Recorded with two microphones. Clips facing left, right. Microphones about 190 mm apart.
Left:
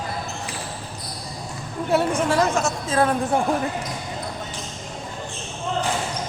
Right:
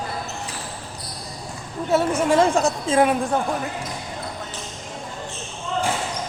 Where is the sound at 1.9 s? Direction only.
Centre (ahead or behind).